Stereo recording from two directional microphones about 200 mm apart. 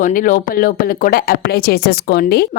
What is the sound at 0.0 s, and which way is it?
Speech, 40° left (ahead or behind).